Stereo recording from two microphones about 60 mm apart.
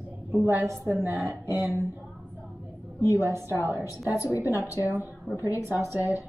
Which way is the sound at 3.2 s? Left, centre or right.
Right.